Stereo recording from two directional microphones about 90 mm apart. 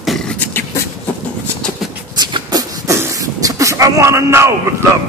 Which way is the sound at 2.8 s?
40° right (ahead or behind).